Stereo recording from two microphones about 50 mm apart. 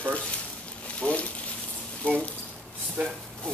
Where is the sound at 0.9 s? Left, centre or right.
Left.